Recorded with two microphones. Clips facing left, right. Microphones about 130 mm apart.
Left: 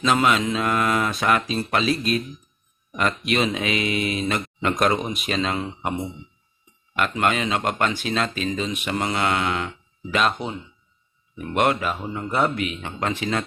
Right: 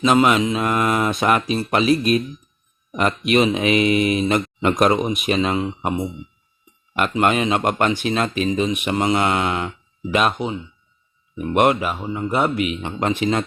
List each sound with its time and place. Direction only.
0.0 s speech: 20° right (ahead or behind)
6.9 s speech: 25° right (ahead or behind)
12.0 s speech: 5° right (ahead or behind)
12.8 s speech: 25° right (ahead or behind)